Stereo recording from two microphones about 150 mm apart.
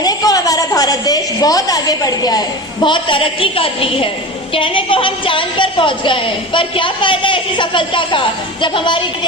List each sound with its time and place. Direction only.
0.0 s a woman's voice: 25° left (ahead or behind)